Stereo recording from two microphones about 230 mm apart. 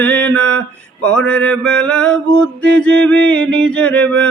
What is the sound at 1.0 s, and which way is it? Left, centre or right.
Music, centre.